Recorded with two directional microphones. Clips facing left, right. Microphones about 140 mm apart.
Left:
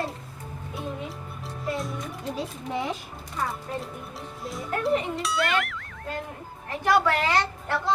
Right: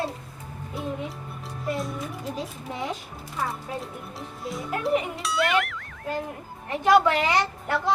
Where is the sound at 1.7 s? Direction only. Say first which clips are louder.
Right 1 dB; centre (ahead or behind).